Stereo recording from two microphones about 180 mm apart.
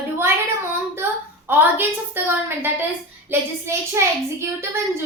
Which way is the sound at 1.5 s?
10° right (ahead or behind).